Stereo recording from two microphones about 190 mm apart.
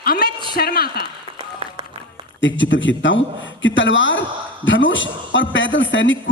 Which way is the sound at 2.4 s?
80° left.